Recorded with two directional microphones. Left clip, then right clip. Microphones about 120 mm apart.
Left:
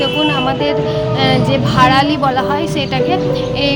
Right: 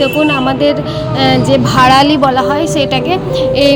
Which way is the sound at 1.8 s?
60° right (ahead or behind).